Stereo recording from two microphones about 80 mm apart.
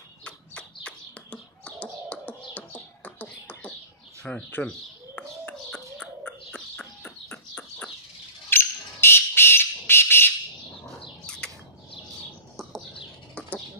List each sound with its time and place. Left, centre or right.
0.8 s a sound: centre
2.5 s beatboxing: centre
4.2 s speech: centre
5.1 s bird: centre
8.5 s a sound: left
11.2 s bird: centre
13.3 s chicken: centre